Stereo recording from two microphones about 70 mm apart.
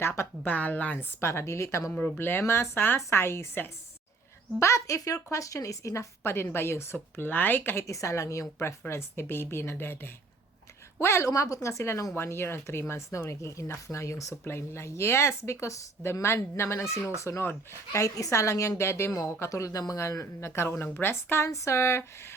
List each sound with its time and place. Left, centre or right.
0.4 s a woman's voice: left
0.9 s speech: left
2.1 s speech: left
4.6 s speech: left
6.2 s speech: left
7.9 s a woman's voice: left
11.3 s speech: left
19.1 s speech: left